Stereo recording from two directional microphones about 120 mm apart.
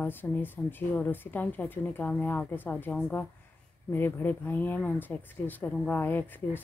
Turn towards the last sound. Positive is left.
turn(degrees=15)  # may be behind; listen again after turning